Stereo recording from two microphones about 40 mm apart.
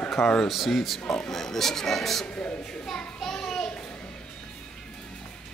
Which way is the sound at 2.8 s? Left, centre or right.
Centre.